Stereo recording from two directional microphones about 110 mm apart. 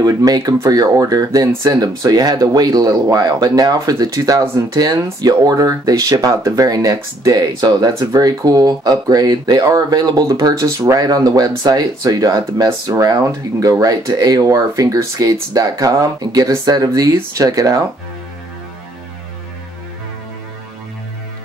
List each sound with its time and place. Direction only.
0.0 s speech: 35° right (ahead or behind)